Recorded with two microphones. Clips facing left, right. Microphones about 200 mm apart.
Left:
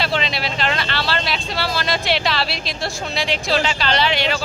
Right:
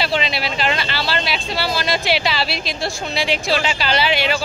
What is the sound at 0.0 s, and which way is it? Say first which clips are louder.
A woman's voice: right 1 dB; 5° right (ahead or behind).